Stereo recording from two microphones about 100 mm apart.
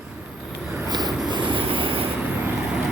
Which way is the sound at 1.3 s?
55° right (ahead or behind).